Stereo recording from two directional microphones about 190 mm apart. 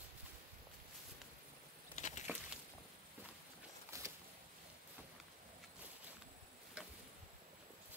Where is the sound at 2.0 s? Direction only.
40° left (ahead or behind).